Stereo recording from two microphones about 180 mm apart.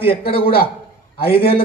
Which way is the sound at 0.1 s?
60° left (ahead or behind).